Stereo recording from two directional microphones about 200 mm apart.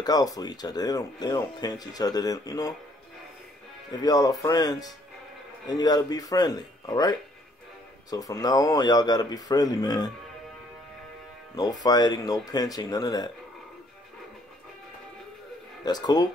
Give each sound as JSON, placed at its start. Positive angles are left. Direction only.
{"t": 0.0, "sound": "speech", "side_deg": 20}
{"t": 4.0, "sound": "speech", "side_deg": 20}
{"t": 11.5, "sound": "speech", "side_deg": 20}
{"t": 15.8, "sound": "speech", "side_deg": 20}